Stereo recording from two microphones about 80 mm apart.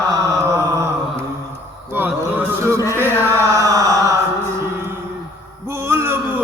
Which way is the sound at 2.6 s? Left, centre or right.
Right.